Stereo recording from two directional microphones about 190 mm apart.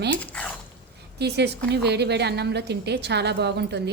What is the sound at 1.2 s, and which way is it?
A woman's voice, 60° right (ahead or behind).